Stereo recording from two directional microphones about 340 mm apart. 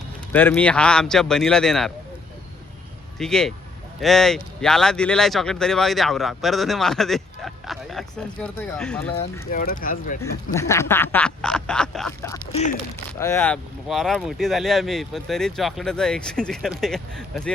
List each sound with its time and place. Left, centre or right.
0.3 s speech: centre
3.2 s speech: centre
9.5 s speech: left
10.5 s speech: centre